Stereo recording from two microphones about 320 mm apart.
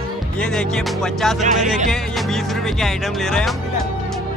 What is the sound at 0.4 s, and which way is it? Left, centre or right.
Speech, centre.